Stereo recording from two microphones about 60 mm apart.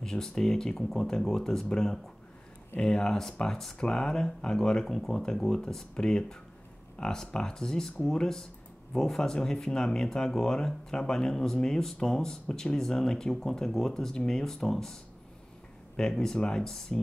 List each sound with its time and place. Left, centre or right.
0.0 s speech: centre
16.0 s speech: centre